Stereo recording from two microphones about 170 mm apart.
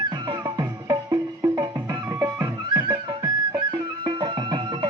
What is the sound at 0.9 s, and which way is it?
Music, 20° right (ahead or behind).